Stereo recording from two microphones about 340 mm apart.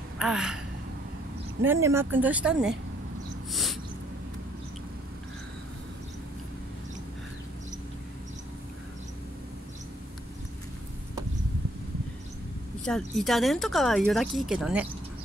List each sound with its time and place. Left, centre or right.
0.2 s speech: centre
1.6 s speech: centre
12.8 s speech: centre